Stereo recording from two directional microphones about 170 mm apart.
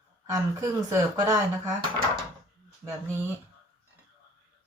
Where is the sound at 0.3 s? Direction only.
15° right (ahead or behind).